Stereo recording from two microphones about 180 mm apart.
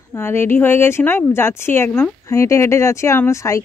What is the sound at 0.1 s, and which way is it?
Speech, 15° left (ahead or behind).